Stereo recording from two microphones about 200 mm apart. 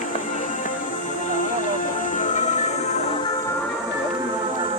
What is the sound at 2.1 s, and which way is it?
Music, 40° left (ahead or behind).